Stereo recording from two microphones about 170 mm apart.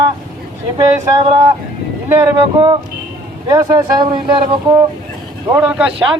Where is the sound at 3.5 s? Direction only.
20° right (ahead or behind).